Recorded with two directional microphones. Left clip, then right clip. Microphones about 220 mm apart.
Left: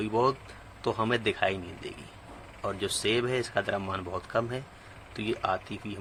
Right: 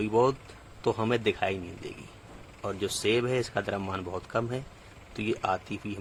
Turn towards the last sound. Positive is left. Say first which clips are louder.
# right 1 dB
turn(degrees=-30)  # may be behind; listen again after turning